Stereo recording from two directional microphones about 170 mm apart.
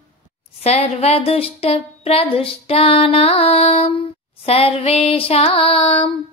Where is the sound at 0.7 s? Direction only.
40° left (ahead or behind).